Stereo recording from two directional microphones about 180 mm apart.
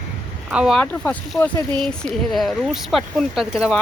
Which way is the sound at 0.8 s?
5° left (ahead or behind).